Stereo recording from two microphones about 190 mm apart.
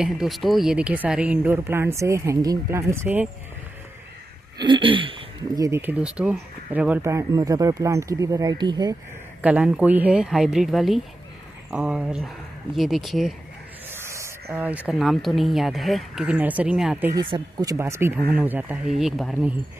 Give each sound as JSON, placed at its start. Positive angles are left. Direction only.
{"t": 0.0, "sound": "speech", "side_deg": 0}
{"t": 4.6, "sound": "speech", "side_deg": -25}
{"t": 5.7, "sound": "speech", "side_deg": -10}
{"t": 9.4, "sound": "speech", "side_deg": -5}
{"t": 13.8, "sound": "speech", "side_deg": -15}
{"t": 17.1, "sound": "speech", "side_deg": -25}